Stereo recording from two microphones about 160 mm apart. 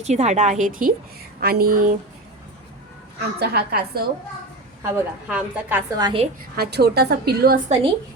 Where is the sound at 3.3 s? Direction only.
90° right.